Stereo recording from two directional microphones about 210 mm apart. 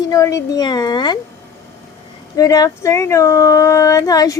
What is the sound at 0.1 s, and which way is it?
Speech, 15° left (ahead or behind).